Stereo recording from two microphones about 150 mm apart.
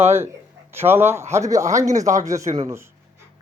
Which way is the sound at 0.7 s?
15° right (ahead or behind).